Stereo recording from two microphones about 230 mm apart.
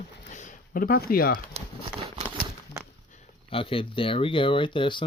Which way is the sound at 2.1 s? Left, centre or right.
Right.